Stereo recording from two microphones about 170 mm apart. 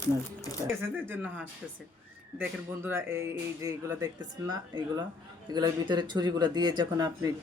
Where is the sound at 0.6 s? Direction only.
15° right (ahead or behind).